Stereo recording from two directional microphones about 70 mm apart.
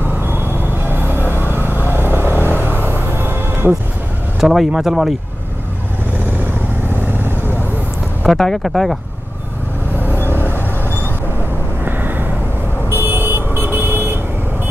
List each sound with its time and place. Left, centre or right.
0.9 s music: right
1.2 s vehicle: left
2.9 s music: right
4.4 s speech: centre
7.1 s vehicle: right
8.3 s speech: centre
11.8 s vehicle: right